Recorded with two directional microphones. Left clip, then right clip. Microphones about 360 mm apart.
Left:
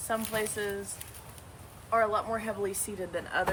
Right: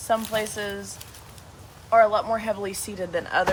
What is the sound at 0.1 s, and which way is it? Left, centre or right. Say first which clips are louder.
Speech: right 7 dB; centre.